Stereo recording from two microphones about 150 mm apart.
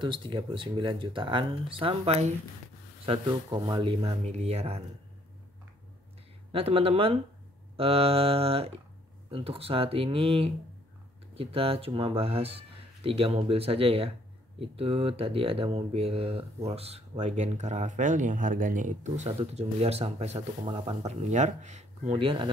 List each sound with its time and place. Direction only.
0.0 s speech: 35° right (ahead or behind)
3.1 s speech: 30° right (ahead or behind)
6.5 s speech: 40° right (ahead or behind)
22.1 s speech: 35° right (ahead or behind)